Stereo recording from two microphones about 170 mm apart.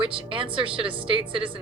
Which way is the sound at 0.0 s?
30° right (ahead or behind).